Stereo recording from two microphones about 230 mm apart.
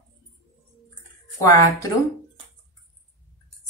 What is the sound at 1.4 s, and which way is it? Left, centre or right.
Speech, centre.